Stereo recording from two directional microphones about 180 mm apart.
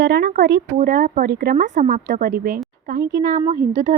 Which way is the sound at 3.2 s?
40° right (ahead or behind).